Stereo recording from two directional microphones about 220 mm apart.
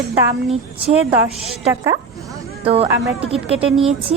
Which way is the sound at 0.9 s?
10° right (ahead or behind).